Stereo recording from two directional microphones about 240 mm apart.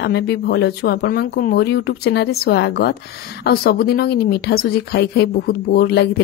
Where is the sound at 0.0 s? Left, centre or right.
Left.